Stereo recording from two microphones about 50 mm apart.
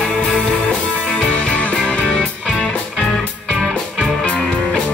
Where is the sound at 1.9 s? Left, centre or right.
Centre.